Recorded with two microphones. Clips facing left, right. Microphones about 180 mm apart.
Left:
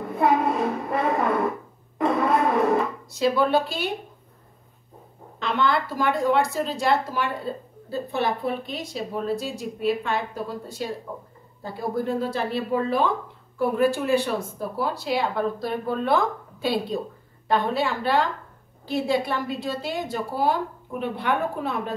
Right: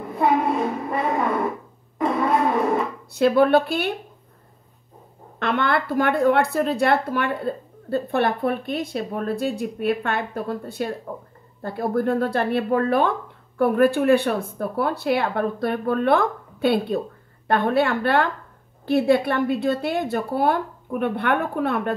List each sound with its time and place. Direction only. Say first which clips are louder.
0.1 s a sound: right 1 dB; centre (ahead or behind)
2.0 s music: right 1 dB; centre (ahead or behind)
3.1 s speech: right 6 dB; 60° right (ahead or behind)
5.4 s speech: right 1 dB; 60° right (ahead or behind)